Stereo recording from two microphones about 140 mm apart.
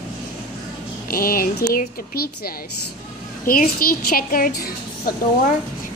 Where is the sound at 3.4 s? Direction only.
90° left.